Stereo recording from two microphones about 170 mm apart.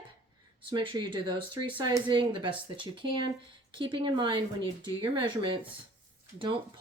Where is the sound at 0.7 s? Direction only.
30° right (ahead or behind).